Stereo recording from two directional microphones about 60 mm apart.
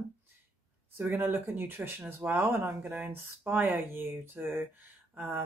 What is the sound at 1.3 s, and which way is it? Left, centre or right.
Speech, right.